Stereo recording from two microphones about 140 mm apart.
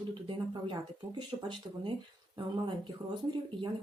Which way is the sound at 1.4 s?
35° right (ahead or behind).